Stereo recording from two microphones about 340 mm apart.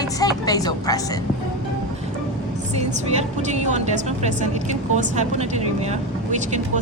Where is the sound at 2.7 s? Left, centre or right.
Centre.